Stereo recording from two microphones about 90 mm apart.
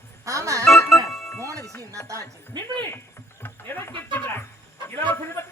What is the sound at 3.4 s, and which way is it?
A man's voice, 25° left (ahead or behind).